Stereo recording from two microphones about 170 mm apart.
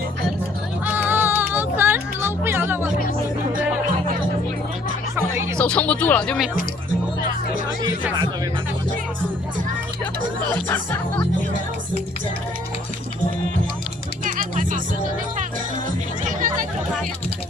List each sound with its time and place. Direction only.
0.9 s music: 10° right (ahead or behind)
5.1 s music: 15° right (ahead or behind)
5.5 s speech: 5° left (ahead or behind)
14.3 s music: 50° right (ahead or behind)
16.2 s chatter: 50° right (ahead or behind)